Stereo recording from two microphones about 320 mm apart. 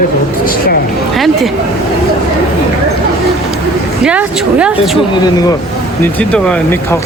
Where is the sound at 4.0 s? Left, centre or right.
Centre.